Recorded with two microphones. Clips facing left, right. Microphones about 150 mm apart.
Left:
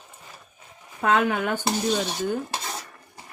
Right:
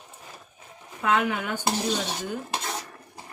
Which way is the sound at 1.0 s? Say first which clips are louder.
Left 3 dB; 55° left (ahead or behind).